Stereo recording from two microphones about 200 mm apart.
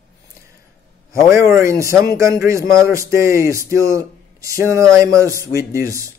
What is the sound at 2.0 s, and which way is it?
Speech, 15° right (ahead or behind).